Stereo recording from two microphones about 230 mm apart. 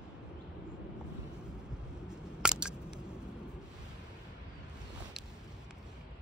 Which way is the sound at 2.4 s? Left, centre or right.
Centre.